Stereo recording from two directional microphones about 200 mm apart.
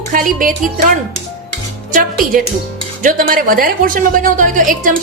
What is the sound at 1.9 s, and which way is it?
A woman's voice, 45° right (ahead or behind).